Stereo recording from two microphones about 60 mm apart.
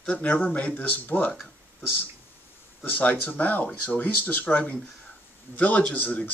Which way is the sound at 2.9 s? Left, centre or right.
Left.